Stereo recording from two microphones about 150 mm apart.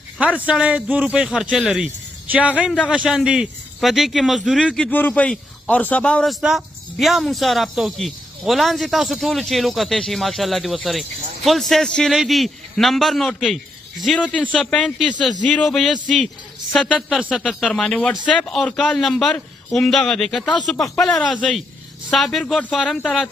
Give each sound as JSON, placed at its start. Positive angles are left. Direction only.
{"t": 0.2, "sound": "speech", "side_deg": -10}